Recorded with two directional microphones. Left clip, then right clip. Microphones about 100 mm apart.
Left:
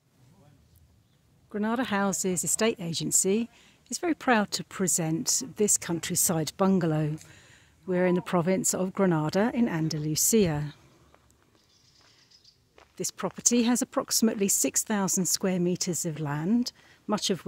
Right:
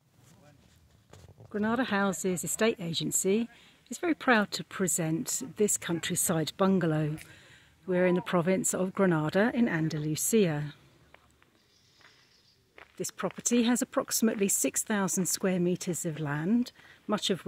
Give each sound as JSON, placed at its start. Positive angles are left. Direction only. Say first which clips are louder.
{"t": 1.5, "sound": "speech", "louder": "left 1 dB", "side_deg": 15}
{"t": 12.9, "sound": "speech", "louder": "left 2 dB", "side_deg": 20}